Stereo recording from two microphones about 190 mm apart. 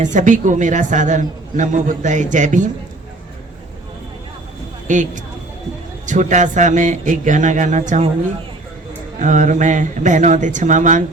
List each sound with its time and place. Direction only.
0.0 s a woman's voice: 40° right (ahead or behind)
4.9 s a woman's voice: 40° right (ahead or behind)
9.1 s a woman's voice: 40° right (ahead or behind)